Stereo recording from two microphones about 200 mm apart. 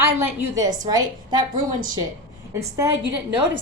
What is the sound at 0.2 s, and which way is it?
A woman's voice, 15° right (ahead or behind).